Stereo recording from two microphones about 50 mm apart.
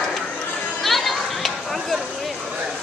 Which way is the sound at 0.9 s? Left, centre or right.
Centre.